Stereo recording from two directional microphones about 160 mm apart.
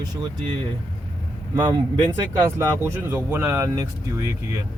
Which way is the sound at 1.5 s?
30° right (ahead or behind).